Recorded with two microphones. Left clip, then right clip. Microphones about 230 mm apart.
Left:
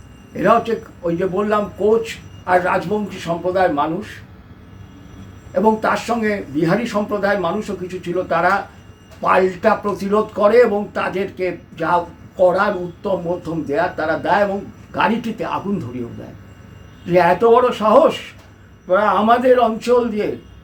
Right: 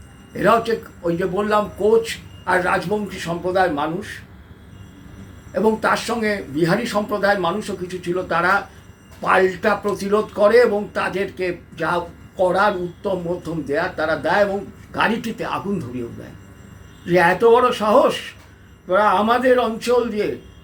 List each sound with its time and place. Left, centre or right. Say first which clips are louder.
0.3 s a man's voice: left 1 dB; centre
5.5 s a man's voice: left 2 dB; centre
17.1 s a man's voice: left 1 dB; centre